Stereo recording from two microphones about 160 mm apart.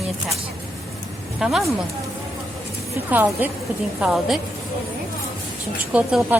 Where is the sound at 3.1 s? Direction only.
10° right (ahead or behind).